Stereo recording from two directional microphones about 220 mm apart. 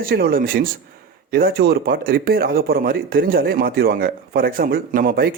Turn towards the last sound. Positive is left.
turn(degrees=-40)  # may be behind; listen again after turning